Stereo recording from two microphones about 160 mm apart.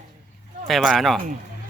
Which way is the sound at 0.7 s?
Centre (ahead or behind).